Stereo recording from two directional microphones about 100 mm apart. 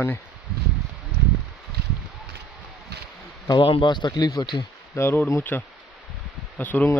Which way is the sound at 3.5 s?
55° left (ahead or behind).